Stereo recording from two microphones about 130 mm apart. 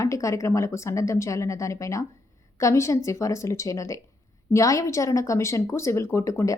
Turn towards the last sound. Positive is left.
turn(degrees=25)  # may be behind; listen again after turning